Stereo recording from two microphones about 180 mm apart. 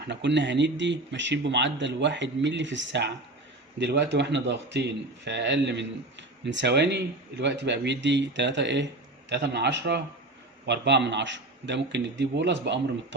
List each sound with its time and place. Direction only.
0.1 s speech: 80° right
3.8 s a man's voice: 70° right (ahead or behind)